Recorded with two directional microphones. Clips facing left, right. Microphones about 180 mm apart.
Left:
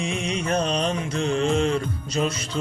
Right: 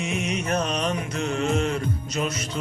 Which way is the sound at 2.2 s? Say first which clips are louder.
Left 4 dB; 30° left (ahead or behind).